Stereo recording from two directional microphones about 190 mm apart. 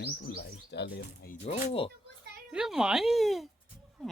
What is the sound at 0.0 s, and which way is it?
Bird, 60° left (ahead or behind).